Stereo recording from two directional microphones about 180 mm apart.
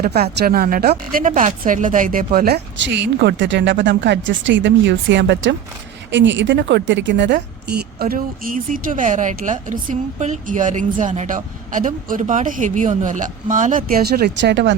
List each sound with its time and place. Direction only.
0.0 s a woman's voice: 60° right (ahead or behind)
2.8 s a woman's voice: 75° right (ahead or behind)
7.9 s a woman's voice: 55° right (ahead or behind); by 14.8 s 70° right (ahead or behind)